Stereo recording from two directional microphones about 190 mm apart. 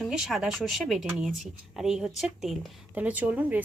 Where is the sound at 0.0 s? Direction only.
Centre (ahead or behind).